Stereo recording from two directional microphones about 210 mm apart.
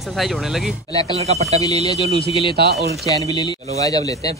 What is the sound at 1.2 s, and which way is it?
Speech, 30° right (ahead or behind).